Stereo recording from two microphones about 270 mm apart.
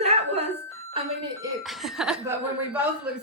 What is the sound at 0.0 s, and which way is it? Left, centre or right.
Doorbell, right.